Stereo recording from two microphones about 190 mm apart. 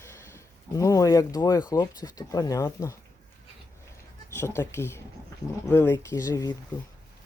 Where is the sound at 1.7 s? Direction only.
15° left (ahead or behind).